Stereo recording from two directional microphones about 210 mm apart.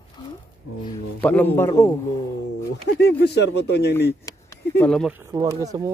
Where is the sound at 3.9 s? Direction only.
10° left (ahead or behind).